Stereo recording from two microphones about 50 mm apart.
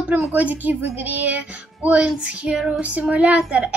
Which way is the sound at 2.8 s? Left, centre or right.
Right.